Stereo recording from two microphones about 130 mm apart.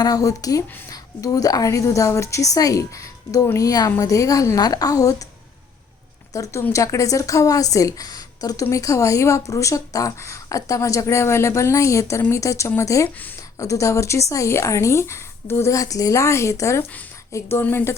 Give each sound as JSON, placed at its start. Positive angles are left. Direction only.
{"t": 0.0, "sound": "a woman's voice", "side_deg": 30}
{"t": 6.3, "sound": "a woman's voice", "side_deg": 25}